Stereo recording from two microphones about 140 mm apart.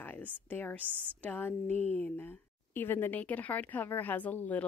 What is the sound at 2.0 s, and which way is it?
Speech, 15° left (ahead or behind).